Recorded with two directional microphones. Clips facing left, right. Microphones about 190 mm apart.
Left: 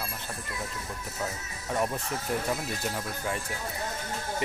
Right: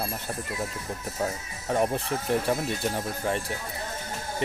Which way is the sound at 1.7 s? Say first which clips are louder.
Right 4 dB; 35° right (ahead or behind).